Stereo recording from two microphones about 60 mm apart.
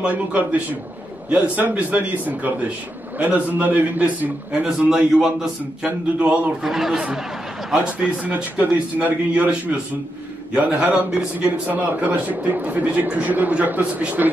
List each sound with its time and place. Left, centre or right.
0.0 s speech: right
4.6 s a man's voice: centre
6.1 s speech: centre
6.6 s speech: centre
7.7 s speech: centre